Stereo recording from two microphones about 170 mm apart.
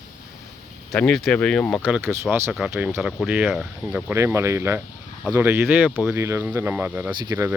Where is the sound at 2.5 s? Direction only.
Centre (ahead or behind).